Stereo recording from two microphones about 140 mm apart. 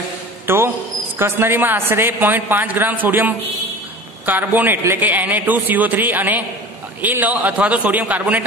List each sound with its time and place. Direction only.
0.5 s a man's voice: 15° right (ahead or behind)